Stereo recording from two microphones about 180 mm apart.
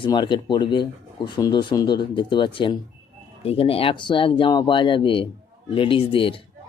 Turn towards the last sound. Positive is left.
turn(degrees=30)  # may be behind; listen again after turning